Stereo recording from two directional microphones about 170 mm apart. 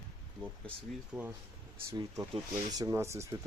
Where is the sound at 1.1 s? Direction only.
Centre (ahead or behind).